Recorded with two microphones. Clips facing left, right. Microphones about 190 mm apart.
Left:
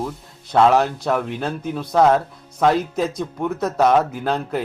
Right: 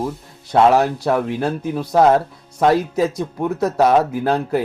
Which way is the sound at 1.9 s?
20° right (ahead or behind).